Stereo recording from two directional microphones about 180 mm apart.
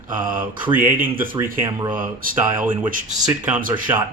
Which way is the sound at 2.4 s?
10° right (ahead or behind).